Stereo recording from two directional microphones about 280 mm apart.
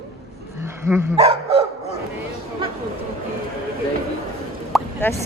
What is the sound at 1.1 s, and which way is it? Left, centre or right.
Speech, right.